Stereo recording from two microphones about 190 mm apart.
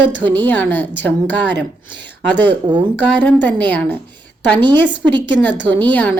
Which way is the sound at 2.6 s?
25° right (ahead or behind).